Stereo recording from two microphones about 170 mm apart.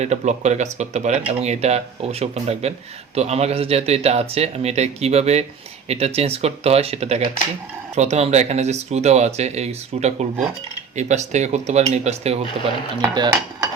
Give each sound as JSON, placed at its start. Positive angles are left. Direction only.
{"t": 0.0, "sound": "speech", "side_deg": -45}
{"t": 13.0, "sound": "cutlery", "side_deg": -20}